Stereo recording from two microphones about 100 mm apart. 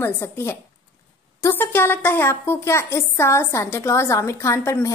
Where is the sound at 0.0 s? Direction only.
25° left (ahead or behind).